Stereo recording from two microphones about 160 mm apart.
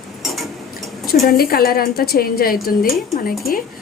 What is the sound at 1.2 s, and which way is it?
A woman's voice, 70° left (ahead or behind).